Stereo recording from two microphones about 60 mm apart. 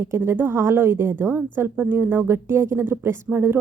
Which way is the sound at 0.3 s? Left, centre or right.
Right.